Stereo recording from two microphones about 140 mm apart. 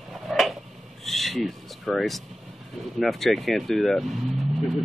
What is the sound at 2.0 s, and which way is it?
Speech, centre (ahead or behind).